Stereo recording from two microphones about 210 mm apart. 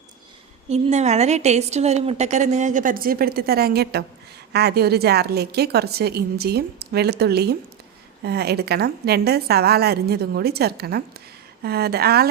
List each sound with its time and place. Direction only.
0.7 s a woman's voice: 30° right (ahead or behind); by 12.3 s 50° right (ahead or behind)